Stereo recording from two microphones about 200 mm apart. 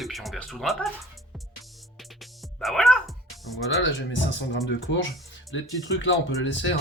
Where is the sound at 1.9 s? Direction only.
Centre (ahead or behind).